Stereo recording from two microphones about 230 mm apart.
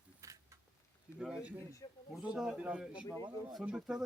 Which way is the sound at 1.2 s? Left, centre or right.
Centre.